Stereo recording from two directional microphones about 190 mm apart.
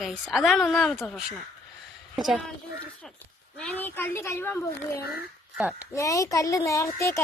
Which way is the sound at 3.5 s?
5° left (ahead or behind).